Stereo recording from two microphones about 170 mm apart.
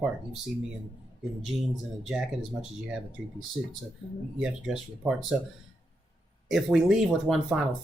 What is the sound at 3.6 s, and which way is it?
Speech, centre (ahead or behind).